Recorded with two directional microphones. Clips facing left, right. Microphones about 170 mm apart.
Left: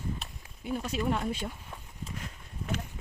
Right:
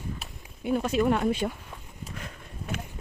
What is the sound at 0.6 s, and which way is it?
Speech, 65° right (ahead or behind).